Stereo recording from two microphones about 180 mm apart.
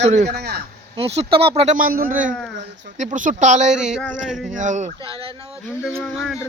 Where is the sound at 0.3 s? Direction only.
65° right (ahead or behind).